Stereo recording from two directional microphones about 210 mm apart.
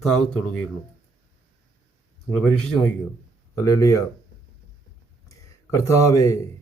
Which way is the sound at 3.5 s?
15° left (ahead or behind).